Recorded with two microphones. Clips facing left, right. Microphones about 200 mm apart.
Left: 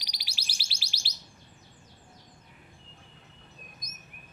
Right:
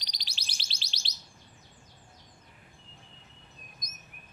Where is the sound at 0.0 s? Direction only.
10° left (ahead or behind).